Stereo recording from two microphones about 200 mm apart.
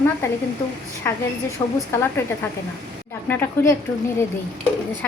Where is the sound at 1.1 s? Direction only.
10° left (ahead or behind).